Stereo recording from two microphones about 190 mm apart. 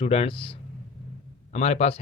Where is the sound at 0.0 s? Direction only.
30° left (ahead or behind).